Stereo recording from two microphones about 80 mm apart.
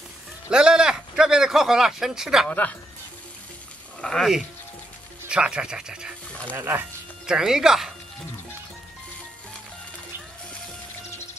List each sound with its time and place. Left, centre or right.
0.5 s a sound: centre
4.0 s speech: centre
5.3 s speech: centre
6.5 s speech: right
7.2 s speech: centre